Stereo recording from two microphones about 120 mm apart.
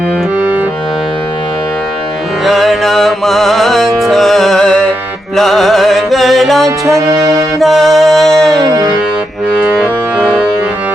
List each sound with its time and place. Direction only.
0.3 s music: 15° right (ahead or behind)
2.4 s music: centre (ahead or behind)
6.7 s music: 25° right (ahead or behind)
7.3 s music: centre (ahead or behind)
9.7 s music: 5° left (ahead or behind)